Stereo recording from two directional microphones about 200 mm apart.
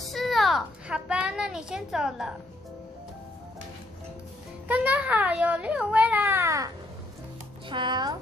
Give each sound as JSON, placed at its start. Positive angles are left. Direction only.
{"t": 0.0, "sound": "a sound", "side_deg": 0}
{"t": 4.6, "sound": "a child's voice", "side_deg": -10}
{"t": 7.7, "sound": "speech", "side_deg": -20}